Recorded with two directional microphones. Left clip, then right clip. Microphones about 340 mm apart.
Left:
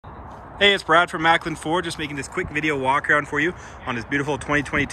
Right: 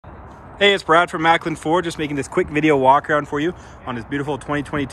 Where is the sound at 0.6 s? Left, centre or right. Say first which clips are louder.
Right 2 dB; centre.